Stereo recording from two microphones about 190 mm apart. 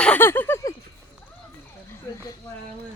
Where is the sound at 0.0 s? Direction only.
10° left (ahead or behind).